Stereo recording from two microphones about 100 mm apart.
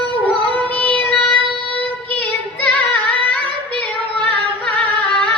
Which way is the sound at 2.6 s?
15° left (ahead or behind).